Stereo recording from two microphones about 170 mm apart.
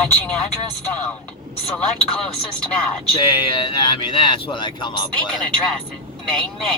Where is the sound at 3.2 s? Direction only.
25° left (ahead or behind).